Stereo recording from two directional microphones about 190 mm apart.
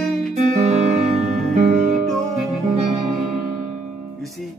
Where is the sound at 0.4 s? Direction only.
35° right (ahead or behind).